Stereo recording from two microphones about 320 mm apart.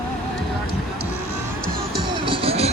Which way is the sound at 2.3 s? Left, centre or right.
Centre.